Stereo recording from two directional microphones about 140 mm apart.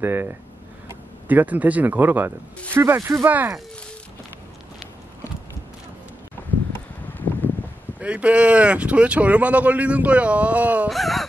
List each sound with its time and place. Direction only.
0.0 s speech: 15° right (ahead or behind)
8.0 s speech: 10° right (ahead or behind)
10.9 s speech: centre (ahead or behind)